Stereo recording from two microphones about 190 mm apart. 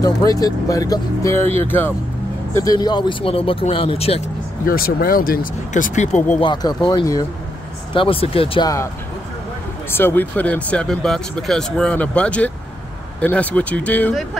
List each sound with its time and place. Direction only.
0.0 s speech: 20° left (ahead or behind)
4.6 s speech: 50° left (ahead or behind)
6.4 s speech: 20° left (ahead or behind)
9.8 s speech: 10° left (ahead or behind)